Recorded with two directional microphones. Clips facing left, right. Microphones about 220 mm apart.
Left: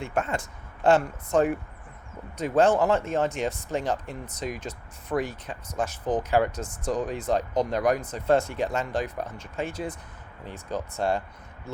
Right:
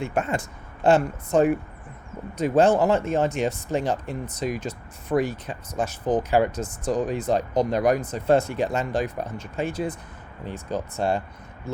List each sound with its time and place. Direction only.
0.0 s speech: 10° right (ahead or behind)